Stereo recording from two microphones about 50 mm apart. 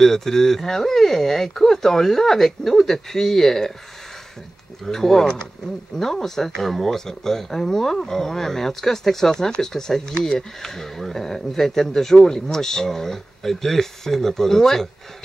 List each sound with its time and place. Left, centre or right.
0.0 s speech: centre
4.8 s speech: centre